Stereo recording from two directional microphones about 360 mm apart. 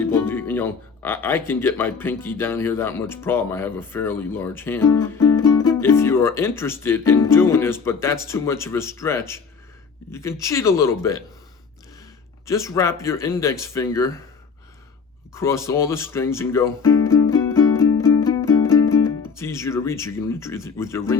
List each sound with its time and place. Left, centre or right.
0.1 s speech: centre
12.5 s speech: centre
15.3 s speech: centre
17.1 s music: centre
17.8 s music: left
18.3 s music: centre
19.4 s speech: centre